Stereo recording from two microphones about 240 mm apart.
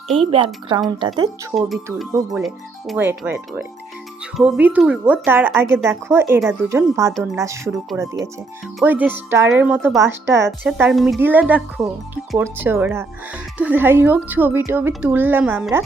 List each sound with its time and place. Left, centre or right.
0.3 s speech: right
1.5 s speech: centre